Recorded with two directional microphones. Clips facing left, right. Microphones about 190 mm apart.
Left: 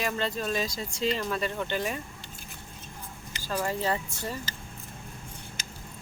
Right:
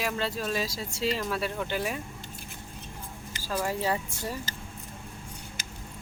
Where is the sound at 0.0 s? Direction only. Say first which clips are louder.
Left 1 dB; 5° right (ahead or behind).